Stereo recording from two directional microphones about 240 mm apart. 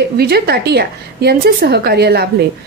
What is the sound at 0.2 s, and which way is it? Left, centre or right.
A woman's voice, right.